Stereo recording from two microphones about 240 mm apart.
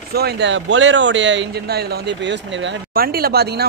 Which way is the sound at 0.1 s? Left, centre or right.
Right.